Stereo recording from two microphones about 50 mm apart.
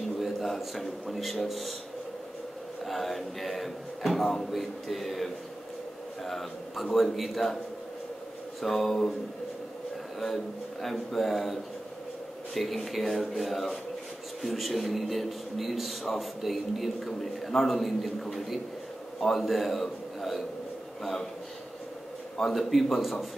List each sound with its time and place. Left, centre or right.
0.2 s a man's voice: centre
2.8 s a man's voice: centre
8.5 s a man's voice: centre
10.2 s a man's voice: centre
12.5 s a man's voice: centre
22.4 s a man's voice: centre